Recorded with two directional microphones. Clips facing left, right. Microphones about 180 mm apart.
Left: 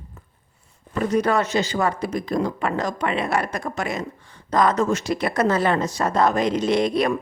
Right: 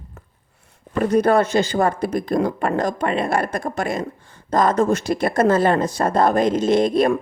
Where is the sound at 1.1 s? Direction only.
55° right (ahead or behind).